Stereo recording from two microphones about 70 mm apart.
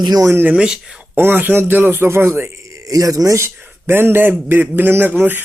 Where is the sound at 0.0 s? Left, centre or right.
Right.